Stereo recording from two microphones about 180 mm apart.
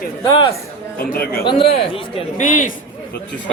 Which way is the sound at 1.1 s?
55° left (ahead or behind).